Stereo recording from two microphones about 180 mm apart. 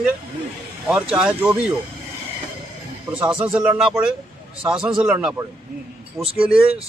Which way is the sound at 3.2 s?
5° right (ahead or behind).